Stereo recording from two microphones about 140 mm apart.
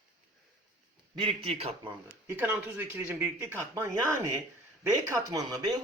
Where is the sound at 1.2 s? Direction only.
40° right (ahead or behind).